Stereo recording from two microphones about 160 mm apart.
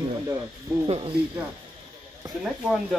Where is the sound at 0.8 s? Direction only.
35° right (ahead or behind).